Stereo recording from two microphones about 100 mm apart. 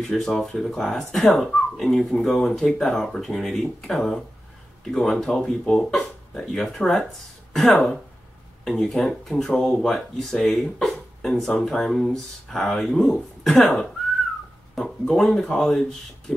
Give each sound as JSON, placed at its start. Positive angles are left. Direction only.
{"t": 0.0, "sound": "speech", "side_deg": 5}